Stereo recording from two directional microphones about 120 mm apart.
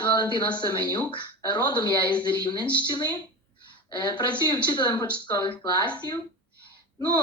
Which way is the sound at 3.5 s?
40° left (ahead or behind).